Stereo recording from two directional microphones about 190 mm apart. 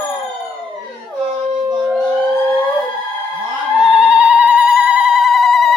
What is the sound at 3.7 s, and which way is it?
Telephone bell ringing, 5° right (ahead or behind).